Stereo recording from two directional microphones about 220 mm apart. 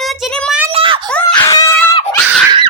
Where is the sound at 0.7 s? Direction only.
25° right (ahead or behind).